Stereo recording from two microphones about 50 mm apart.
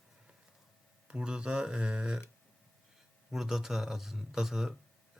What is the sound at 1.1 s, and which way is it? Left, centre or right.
Speech, centre.